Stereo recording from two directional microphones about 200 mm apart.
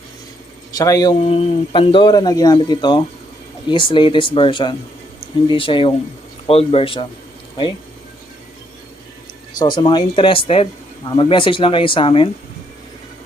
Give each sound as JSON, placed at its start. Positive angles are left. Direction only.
{"t": 0.8, "sound": "speech", "side_deg": 20}
{"t": 1.2, "sound": "speech", "side_deg": 30}
{"t": 9.6, "sound": "speech", "side_deg": 20}